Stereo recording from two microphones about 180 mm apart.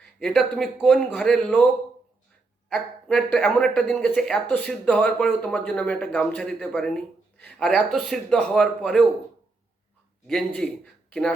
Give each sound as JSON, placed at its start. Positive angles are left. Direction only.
{"t": 0.0, "sound": "speech", "side_deg": 0}
{"t": 2.6, "sound": "speech", "side_deg": 5}
{"t": 10.2, "sound": "speech", "side_deg": 5}